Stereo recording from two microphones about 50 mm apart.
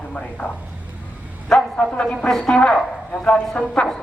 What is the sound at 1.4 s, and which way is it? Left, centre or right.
Bow-wow, centre.